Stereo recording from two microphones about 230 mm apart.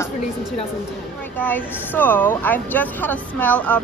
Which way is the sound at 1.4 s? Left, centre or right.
Centre.